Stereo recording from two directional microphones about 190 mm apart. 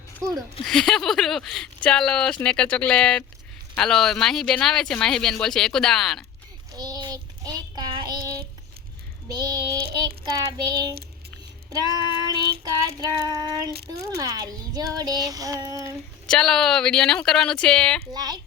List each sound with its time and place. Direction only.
0.6 s speech: centre (ahead or behind)
6.7 s child singing: 20° right (ahead or behind)
9.3 s child singing: 20° right (ahead or behind)
16.2 s speech: 5° left (ahead or behind)
18.1 s child singing: 20° right (ahead or behind)